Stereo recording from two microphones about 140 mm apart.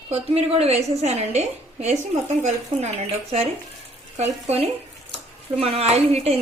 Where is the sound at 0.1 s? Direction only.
45° right (ahead or behind).